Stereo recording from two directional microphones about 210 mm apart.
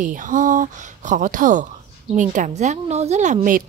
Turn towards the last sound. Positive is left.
turn(degrees=-40)  # may be behind; listen again after turning